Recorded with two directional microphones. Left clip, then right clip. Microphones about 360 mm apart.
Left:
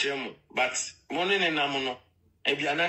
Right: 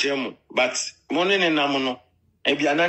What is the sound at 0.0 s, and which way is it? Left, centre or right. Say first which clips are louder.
A man's voice: right 6 dB; centre.